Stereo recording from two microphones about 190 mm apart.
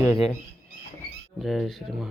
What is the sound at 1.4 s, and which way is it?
Speech, centre (ahead or behind).